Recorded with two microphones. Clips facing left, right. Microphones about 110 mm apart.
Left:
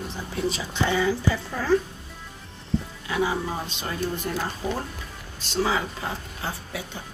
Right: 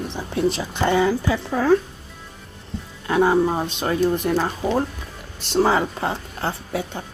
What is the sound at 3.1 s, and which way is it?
Speech, 55° right (ahead or behind).